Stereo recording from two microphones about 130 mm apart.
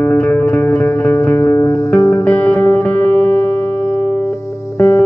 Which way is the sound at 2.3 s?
10° left (ahead or behind).